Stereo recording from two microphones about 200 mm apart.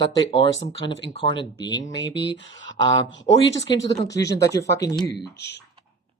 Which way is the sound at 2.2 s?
70° left (ahead or behind).